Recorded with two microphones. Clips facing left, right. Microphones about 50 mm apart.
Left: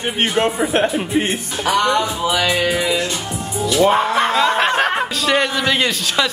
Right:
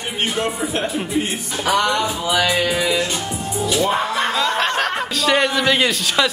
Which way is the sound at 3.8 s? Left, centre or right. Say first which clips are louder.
Left 6 dB; left.